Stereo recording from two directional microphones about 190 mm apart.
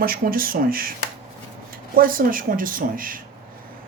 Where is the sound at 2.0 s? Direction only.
45° right (ahead or behind).